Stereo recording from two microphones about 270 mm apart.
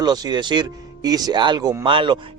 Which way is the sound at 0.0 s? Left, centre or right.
Centre.